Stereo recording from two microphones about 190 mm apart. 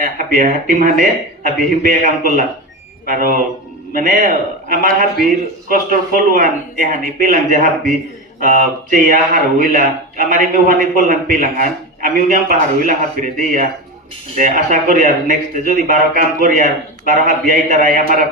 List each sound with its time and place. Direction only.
0.0 s speech: 45° right (ahead or behind)